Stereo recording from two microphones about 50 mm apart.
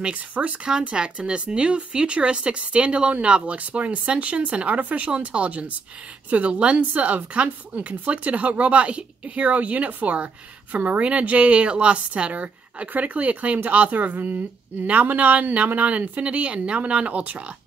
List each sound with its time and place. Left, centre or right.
0.0 s speech: right
0.7 s speech: centre